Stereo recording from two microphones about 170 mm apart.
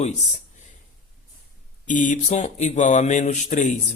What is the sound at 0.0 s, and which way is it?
Speech, 40° left (ahead or behind).